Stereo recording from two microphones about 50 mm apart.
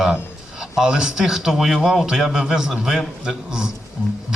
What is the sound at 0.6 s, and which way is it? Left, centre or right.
A man's voice, centre.